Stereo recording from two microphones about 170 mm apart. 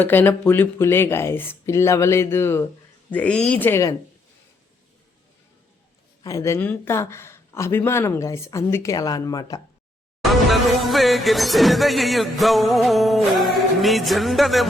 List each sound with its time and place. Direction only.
0.0 s speech: 10° left (ahead or behind)
6.2 s speech: 20° left (ahead or behind)
10.3 s music: centre (ahead or behind)